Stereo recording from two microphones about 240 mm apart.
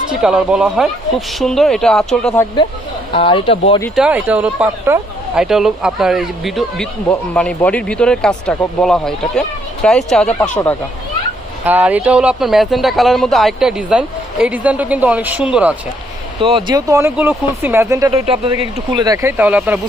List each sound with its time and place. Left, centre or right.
0.1 s speech: centre
3.1 s speech: left
3.9 s speech: centre
11.6 s speech: centre
16.4 s speech: right